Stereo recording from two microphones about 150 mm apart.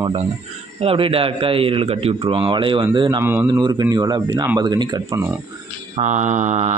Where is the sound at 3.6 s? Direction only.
25° right (ahead or behind).